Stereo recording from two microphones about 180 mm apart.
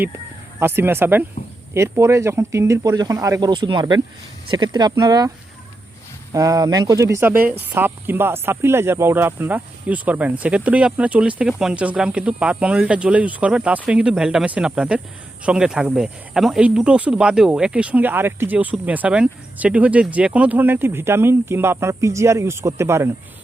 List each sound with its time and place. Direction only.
0.6 s speech: 10° right (ahead or behind)
6.3 s speech: 20° right (ahead or behind)